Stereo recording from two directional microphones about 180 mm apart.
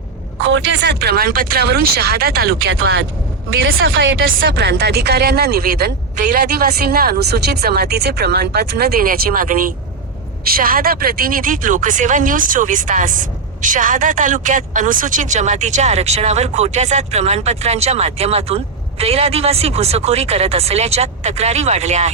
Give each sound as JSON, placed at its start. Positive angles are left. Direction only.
{"t": 0.5, "sound": "speech", "side_deg": -75}
{"t": 3.5, "sound": "a woman's voice", "side_deg": -90}